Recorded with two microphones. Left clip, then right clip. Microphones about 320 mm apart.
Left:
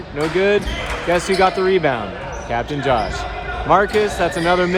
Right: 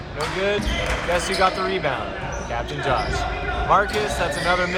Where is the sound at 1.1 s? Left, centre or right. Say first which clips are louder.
Left 5 dB; left.